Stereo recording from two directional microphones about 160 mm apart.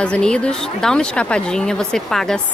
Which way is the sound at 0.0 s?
5° left (ahead or behind).